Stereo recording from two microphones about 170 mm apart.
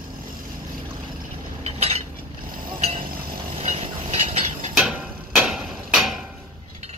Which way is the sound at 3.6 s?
40° right (ahead or behind).